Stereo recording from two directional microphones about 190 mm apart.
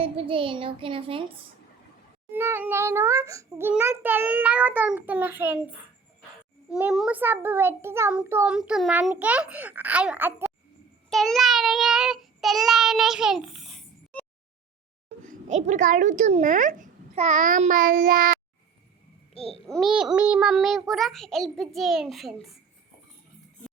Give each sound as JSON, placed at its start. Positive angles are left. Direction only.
{"t": 0.0, "sound": "a child's voice", "side_deg": -30}
{"t": 2.3, "sound": "a child's voice", "side_deg": -10}
{"t": 6.7, "sound": "a child's voice", "side_deg": -5}
{"t": 11.1, "sound": "child singing", "side_deg": 0}
{"t": 15.2, "sound": "a child's voice", "side_deg": -40}
{"t": 19.3, "sound": "babbling", "side_deg": 30}
{"t": 19.6, "sound": "a child's voice", "side_deg": 0}